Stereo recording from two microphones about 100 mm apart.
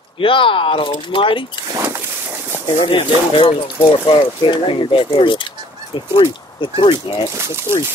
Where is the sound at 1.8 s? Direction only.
25° right (ahead or behind).